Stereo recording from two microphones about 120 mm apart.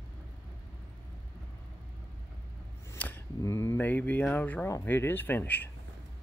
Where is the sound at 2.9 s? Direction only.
15° left (ahead or behind).